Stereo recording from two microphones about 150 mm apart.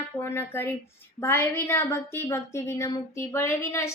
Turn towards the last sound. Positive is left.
turn(degrees=15)  # may be behind; listen again after turning